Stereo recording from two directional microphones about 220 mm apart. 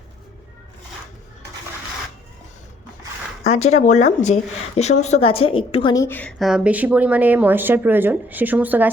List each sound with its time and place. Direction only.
3.4 s a woman's voice: 30° left (ahead or behind); by 8.9 s 5° right (ahead or behind)